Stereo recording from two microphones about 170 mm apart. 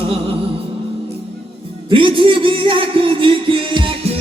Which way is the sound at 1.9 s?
30° right (ahead or behind).